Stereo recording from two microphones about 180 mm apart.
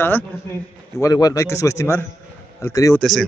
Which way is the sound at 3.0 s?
Centre (ahead or behind).